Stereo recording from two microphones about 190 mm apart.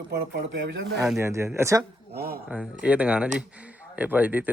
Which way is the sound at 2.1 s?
55° right (ahead or behind).